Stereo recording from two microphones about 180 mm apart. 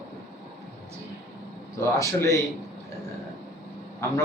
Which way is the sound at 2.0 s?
15° left (ahead or behind).